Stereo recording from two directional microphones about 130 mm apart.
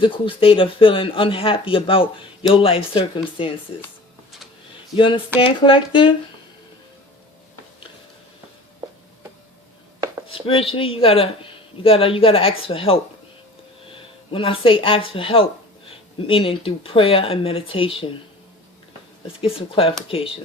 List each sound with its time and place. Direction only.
0.0 s speech: 45° left (ahead or behind)
4.9 s speech: 40° left (ahead or behind)
10.2 s speech: 45° left (ahead or behind)
19.4 s speech: 45° left (ahead or behind)